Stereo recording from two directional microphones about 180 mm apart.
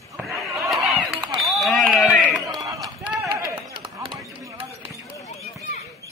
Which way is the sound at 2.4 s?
20° right (ahead or behind).